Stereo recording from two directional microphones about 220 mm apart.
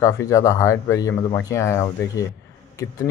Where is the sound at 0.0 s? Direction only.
15° left (ahead or behind).